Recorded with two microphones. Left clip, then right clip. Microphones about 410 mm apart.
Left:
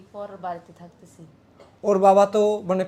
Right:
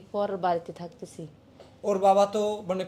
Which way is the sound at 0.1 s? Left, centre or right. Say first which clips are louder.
Right 6 dB; right.